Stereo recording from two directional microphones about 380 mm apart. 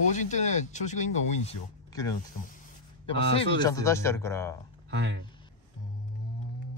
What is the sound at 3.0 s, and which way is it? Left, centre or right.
Speech, centre.